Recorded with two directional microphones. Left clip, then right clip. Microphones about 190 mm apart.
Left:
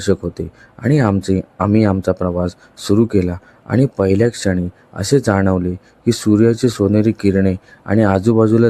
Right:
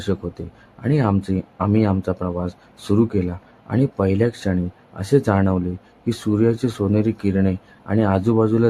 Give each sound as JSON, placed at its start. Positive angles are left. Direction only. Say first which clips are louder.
{"t": 0.0, "sound": "speech", "louder": "left 8 dB", "side_deg": 20}